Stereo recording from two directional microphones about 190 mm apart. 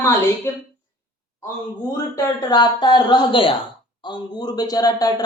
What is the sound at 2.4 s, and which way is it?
Speech, 20° left (ahead or behind).